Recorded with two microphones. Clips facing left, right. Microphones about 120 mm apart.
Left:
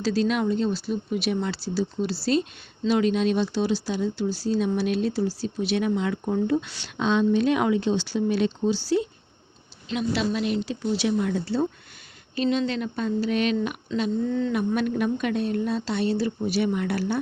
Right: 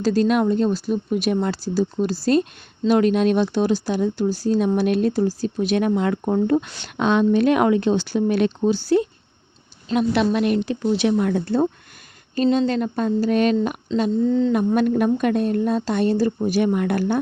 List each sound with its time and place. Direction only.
0.0 s a woman's voice: 45° right (ahead or behind)